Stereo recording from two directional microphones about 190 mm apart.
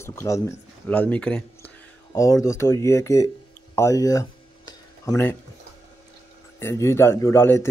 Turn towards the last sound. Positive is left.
turn(degrees=15)  # may be behind; listen again after turning